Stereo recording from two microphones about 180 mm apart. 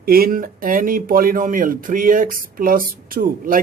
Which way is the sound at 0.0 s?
55° right (ahead or behind).